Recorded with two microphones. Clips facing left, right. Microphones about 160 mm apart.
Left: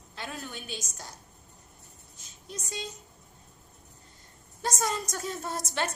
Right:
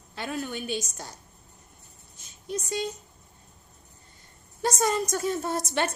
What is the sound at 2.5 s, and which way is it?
Speech, 65° right (ahead or behind).